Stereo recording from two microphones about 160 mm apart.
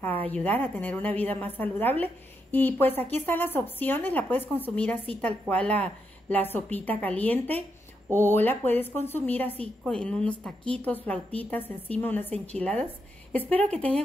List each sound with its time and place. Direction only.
0.3 s speech: 10° left (ahead or behind)